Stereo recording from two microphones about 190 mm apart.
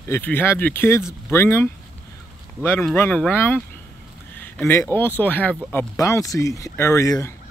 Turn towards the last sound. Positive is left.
turn(degrees=15)  # may be behind; listen again after turning